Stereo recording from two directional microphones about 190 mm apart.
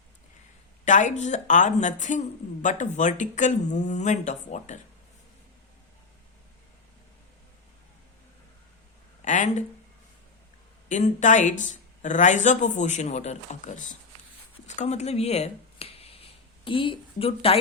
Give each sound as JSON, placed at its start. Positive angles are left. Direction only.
{"t": 0.9, "sound": "speech", "side_deg": 40}
{"t": 9.2, "sound": "speech", "side_deg": 40}
{"t": 10.8, "sound": "speech", "side_deg": 40}